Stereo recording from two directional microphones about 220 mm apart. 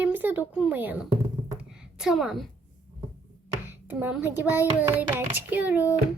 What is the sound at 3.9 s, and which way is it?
A child's voice, 10° right (ahead or behind).